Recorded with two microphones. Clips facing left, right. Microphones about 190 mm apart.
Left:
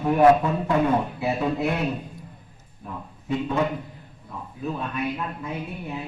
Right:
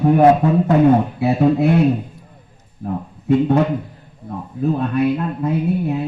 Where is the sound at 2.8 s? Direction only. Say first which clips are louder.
Right 12 dB; 55° right (ahead or behind).